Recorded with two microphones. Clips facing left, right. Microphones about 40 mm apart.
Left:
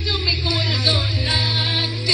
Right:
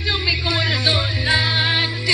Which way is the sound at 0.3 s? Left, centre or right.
Right.